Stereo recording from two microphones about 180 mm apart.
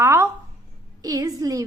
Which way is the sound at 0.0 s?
15° right (ahead or behind).